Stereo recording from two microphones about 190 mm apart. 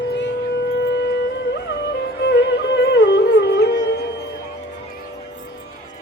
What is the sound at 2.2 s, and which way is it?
Music, 60° left (ahead or behind).